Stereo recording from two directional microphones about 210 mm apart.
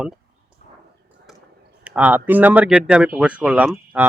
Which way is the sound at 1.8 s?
5° right (ahead or behind).